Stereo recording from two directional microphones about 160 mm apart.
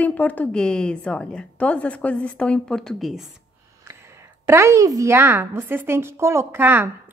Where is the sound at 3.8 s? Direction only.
15° right (ahead or behind).